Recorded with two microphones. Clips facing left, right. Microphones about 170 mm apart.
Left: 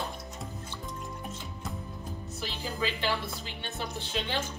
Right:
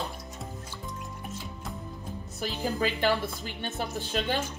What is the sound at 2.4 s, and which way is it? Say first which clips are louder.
Music: right 5 dB; 50° right (ahead or behind).